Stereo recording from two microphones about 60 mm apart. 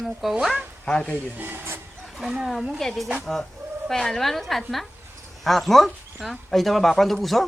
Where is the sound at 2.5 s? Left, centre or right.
Centre.